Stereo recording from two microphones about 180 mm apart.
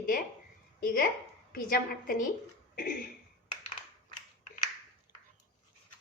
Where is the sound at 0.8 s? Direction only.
50° left (ahead or behind).